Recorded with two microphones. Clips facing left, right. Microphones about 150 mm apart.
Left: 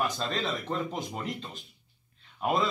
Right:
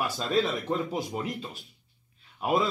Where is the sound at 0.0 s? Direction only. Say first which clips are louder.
Right 4 dB; 10° right (ahead or behind).